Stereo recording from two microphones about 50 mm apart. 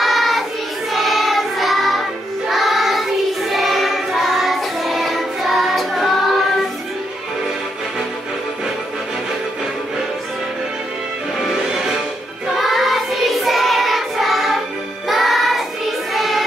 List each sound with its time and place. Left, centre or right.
0.0 s child singing: centre
0.9 s music: centre
11.3 s music: centre
12.5 s child singing: centre
15.0 s music: centre